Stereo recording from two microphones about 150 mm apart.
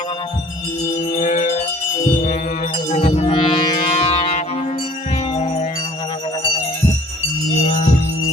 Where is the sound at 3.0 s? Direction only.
35° left (ahead or behind).